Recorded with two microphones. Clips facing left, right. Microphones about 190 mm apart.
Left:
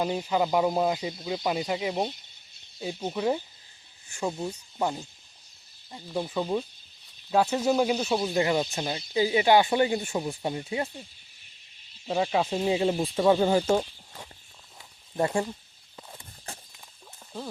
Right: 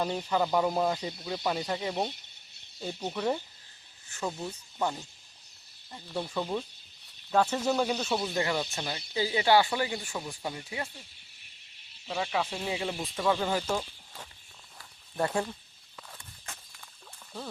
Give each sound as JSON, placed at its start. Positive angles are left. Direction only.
{"t": 0.0, "sound": "speech", "side_deg": 10}
{"t": 12.0, "sound": "speech", "side_deg": 30}
{"t": 15.2, "sound": "speech", "side_deg": 10}
{"t": 16.0, "sound": "walk", "side_deg": 25}